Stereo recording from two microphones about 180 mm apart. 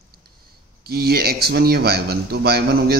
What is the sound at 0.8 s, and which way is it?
Speech, 60° right (ahead or behind).